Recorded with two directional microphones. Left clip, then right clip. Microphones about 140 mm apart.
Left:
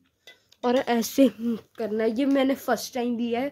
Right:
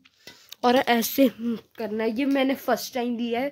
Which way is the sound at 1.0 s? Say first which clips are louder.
Even; 10° left (ahead or behind).